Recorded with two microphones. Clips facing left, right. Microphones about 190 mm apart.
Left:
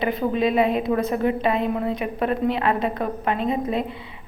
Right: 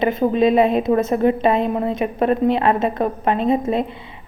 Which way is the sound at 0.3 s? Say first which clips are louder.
Right 5 dB; 25° right (ahead or behind).